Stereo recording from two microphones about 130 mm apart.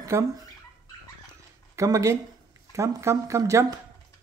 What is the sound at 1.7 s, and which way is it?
Speech, 25° right (ahead or behind).